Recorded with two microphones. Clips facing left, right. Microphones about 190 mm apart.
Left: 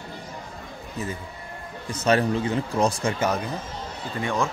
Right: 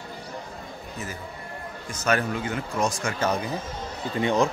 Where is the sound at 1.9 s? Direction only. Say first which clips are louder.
Left 4 dB; 30° left (ahead or behind).